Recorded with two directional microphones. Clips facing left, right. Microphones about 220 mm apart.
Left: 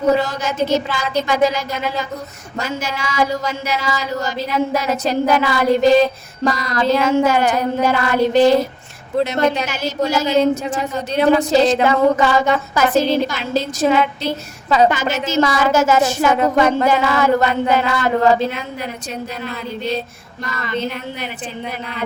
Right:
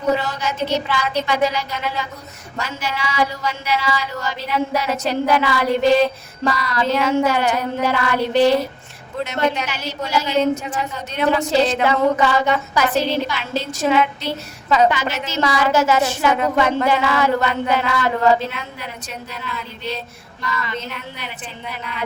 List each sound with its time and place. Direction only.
0.2 s a woman's voice: 45° left (ahead or behind)
19.3 s a woman's voice: 40° left (ahead or behind)